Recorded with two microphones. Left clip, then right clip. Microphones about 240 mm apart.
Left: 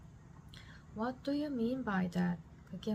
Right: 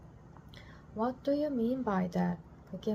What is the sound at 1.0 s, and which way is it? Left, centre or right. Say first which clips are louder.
A woman's voice: right 6 dB; centre.